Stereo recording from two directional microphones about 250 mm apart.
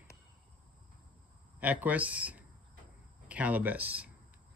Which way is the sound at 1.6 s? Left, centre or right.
Centre.